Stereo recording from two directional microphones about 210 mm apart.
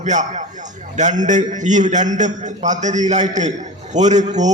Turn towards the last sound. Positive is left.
turn(degrees=-35)  # may be behind; listen again after turning